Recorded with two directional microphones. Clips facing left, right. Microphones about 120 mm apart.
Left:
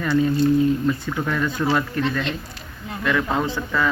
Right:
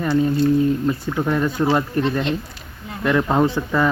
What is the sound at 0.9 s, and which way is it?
Speech, 30° right (ahead or behind).